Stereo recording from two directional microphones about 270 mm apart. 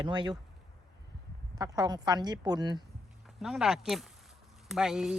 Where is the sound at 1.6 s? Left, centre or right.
Centre.